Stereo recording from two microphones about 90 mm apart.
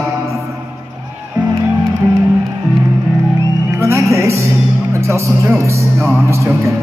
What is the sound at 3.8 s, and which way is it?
Music, 35° right (ahead or behind).